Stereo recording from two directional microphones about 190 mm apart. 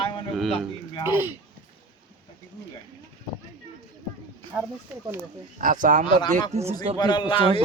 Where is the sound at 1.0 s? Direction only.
10° right (ahead or behind).